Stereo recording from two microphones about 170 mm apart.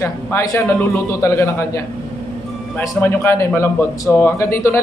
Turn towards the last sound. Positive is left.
turn(degrees=15)  # may be behind; listen again after turning